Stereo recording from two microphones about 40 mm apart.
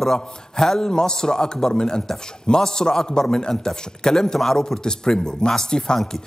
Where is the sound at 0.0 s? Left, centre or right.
Centre.